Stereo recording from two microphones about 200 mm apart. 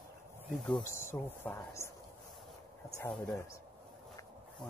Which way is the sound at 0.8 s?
10° left (ahead or behind).